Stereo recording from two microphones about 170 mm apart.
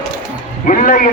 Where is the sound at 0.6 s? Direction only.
50° left (ahead or behind).